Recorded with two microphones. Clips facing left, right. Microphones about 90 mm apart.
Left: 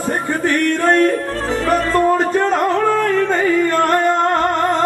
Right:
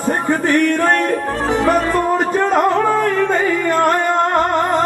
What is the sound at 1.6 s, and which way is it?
Music, 15° right (ahead or behind).